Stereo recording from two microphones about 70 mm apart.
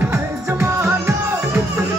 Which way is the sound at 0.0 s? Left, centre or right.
Right.